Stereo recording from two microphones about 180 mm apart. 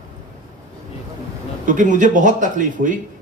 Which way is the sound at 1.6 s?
45° right (ahead or behind).